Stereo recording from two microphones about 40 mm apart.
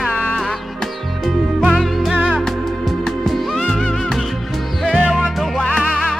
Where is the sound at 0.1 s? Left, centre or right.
Left.